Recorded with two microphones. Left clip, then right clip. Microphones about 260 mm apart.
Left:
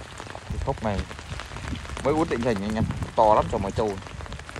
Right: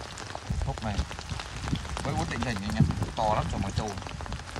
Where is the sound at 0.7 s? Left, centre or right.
Right.